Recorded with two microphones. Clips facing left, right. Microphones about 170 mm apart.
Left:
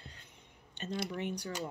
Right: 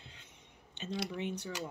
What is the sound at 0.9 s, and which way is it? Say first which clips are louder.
Speech: left 1 dB; 55° left (ahead or behind).